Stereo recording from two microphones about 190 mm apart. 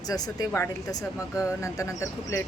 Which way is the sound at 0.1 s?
15° left (ahead or behind).